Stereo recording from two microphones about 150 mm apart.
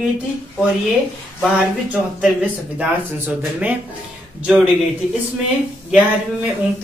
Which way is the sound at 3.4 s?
10° right (ahead or behind).